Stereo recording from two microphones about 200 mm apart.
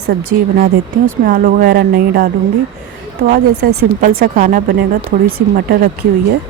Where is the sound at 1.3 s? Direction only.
45° right (ahead or behind).